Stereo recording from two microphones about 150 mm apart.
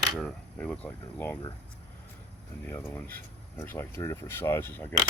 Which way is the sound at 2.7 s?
15° left (ahead or behind).